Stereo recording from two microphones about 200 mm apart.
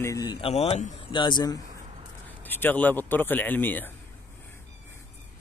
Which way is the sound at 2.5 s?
10° left (ahead or behind).